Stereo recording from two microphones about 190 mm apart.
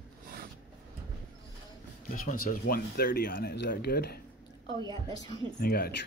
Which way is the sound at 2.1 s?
45° left (ahead or behind).